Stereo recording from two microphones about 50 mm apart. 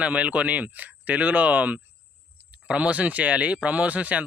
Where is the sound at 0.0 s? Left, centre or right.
Right.